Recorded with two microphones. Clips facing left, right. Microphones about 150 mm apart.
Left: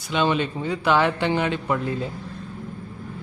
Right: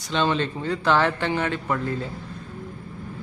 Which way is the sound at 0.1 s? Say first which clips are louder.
Left 1 dB; 10° left (ahead or behind).